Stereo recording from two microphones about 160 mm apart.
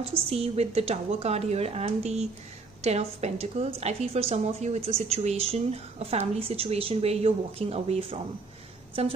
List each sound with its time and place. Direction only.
0.1 s a woman's voice: 40° right (ahead or behind)